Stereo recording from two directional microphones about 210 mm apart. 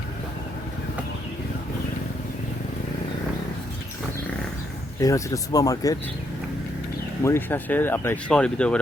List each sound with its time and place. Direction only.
4.9 s speech: 15° left (ahead or behind)
7.3 s speech: 10° left (ahead or behind)